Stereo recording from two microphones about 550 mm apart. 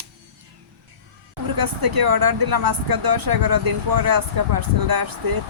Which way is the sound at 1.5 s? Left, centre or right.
Right.